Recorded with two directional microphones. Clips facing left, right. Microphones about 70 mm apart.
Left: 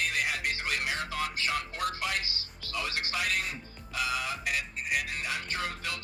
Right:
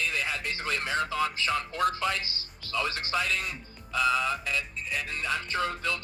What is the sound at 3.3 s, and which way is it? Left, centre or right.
Speech, left.